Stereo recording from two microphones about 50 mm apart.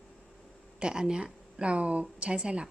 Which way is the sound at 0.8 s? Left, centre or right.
Centre.